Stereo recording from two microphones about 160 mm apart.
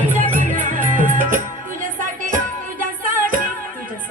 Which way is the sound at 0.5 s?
55° right (ahead or behind).